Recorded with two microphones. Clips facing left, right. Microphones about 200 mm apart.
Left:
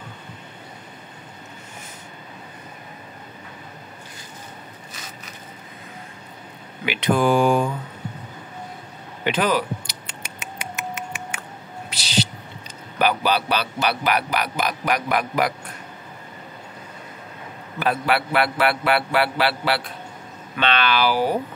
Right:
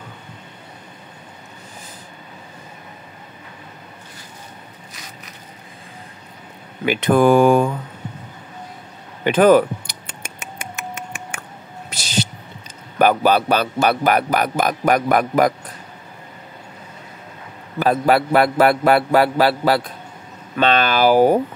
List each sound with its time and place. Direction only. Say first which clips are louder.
6.9 s speech: right 5 dB; 50° right (ahead or behind)
9.2 s a sound: right 9 dB; 50° right (ahead or behind)
13.0 s speech: right 6 dB; 50° right (ahead or behind)
17.7 s a man's voice: right 6 dB; 40° right (ahead or behind)